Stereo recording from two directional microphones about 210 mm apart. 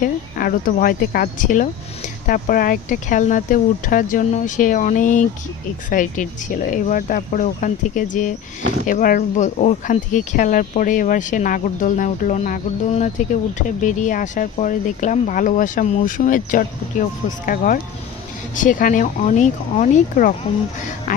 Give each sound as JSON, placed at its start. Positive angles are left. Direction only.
{"t": 0.0, "sound": "speech", "side_deg": 40}